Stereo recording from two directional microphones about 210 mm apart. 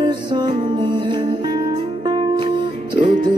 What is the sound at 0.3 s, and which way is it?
Music, 20° right (ahead or behind).